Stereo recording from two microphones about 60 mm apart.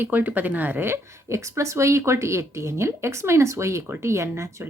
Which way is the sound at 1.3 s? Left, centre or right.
Right.